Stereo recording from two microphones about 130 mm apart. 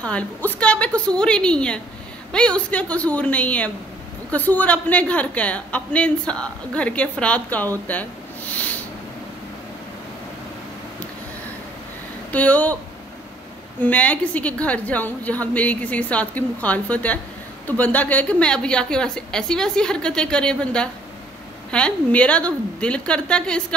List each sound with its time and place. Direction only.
0.0 s a woman's voice: 10° left (ahead or behind)
7.8 s a sound: 10° left (ahead or behind)
12.3 s speech: 10° left (ahead or behind)
13.7 s a woman's voice: 10° left (ahead or behind)